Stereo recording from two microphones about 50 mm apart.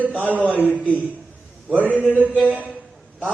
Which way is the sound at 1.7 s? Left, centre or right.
Right.